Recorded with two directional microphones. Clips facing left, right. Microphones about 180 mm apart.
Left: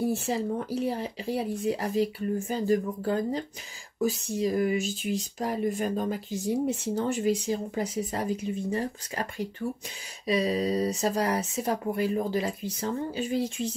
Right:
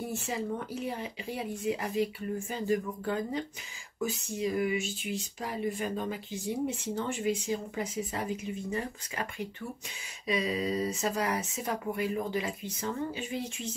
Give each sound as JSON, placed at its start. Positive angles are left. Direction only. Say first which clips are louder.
{"t": 0.0, "sound": "speech", "louder": "left 7 dB", "side_deg": 35}